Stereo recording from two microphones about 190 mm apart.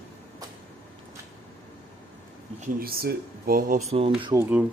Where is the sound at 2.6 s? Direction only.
50° right (ahead or behind).